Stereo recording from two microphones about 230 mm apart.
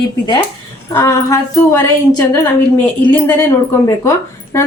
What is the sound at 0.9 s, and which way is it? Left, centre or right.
A woman's voice, centre.